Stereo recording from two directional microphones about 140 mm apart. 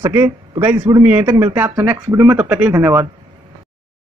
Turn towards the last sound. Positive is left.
turn(degrees=-20)  # may be behind; listen again after turning